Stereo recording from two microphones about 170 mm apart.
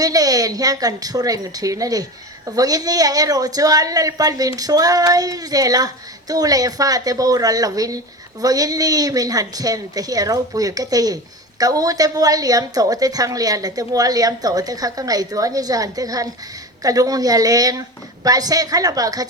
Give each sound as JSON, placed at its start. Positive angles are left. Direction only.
{"t": 0.0, "sound": "a woman's voice", "side_deg": -20}